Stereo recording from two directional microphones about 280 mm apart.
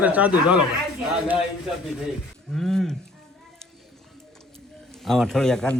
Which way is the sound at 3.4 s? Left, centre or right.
Centre.